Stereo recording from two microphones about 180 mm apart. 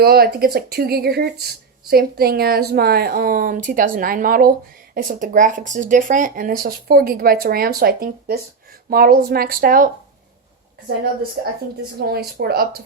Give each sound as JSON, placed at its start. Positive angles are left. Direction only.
{"t": 0.0, "sound": "speech", "side_deg": -60}
{"t": 11.4, "sound": "speech", "side_deg": -60}